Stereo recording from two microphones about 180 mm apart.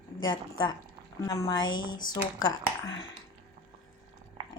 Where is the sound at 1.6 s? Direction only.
90° left.